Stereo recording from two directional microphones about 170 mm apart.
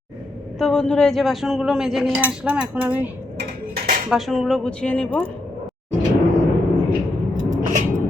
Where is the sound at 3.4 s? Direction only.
60° right (ahead or behind).